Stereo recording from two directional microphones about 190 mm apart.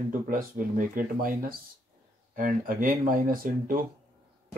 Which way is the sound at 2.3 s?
45° right (ahead or behind).